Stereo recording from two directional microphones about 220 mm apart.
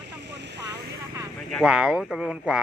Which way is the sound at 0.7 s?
15° right (ahead or behind).